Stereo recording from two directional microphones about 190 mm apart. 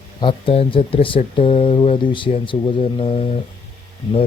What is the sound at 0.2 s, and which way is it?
Speech, 25° left (ahead or behind).